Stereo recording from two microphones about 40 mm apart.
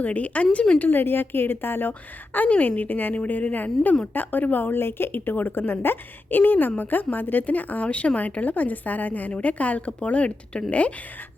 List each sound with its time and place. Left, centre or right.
0.0 s a woman's voice: left
0.8 s a woman's voice: left
1.9 s a woman's voice: left
7.9 s a woman's voice: left